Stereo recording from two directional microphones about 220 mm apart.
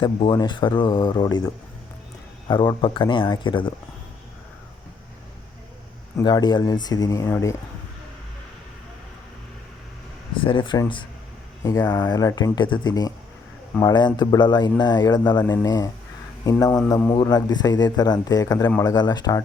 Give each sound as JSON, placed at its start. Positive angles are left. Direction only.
{"t": 0.0, "sound": "speech", "side_deg": 20}
{"t": 6.1, "sound": "speech", "side_deg": 20}
{"t": 10.4, "sound": "speech", "side_deg": 25}